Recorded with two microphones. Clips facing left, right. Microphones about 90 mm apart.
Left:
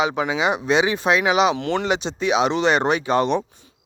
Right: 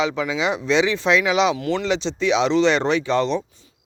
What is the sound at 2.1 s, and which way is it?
Speech, 50° left (ahead or behind).